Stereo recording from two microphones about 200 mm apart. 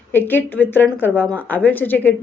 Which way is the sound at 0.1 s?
10° left (ahead or behind).